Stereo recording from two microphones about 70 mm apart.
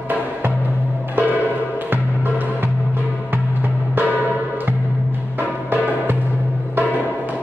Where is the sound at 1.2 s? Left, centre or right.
Right.